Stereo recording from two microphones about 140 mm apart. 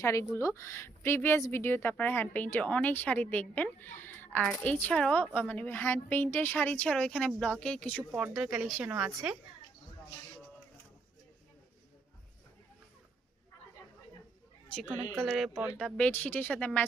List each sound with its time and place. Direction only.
0.0 s a woman's voice: 20° left (ahead or behind)
8.1 s speech: 5° right (ahead or behind)
15.2 s speech: centre (ahead or behind)
16.0 s a woman's voice: 10° left (ahead or behind)